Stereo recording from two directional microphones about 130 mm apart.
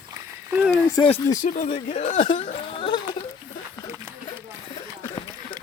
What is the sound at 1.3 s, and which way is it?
Speech, 75° left (ahead or behind).